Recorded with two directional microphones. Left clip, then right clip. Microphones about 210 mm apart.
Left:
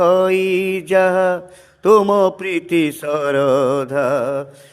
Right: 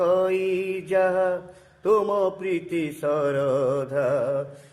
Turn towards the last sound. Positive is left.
turn(degrees=55)  # may be behind; listen again after turning